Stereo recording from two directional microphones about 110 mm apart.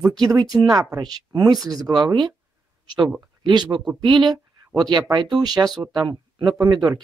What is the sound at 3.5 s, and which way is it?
Speech, 40° right (ahead or behind).